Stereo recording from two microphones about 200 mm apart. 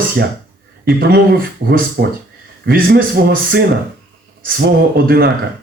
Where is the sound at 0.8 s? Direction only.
50° right (ahead or behind).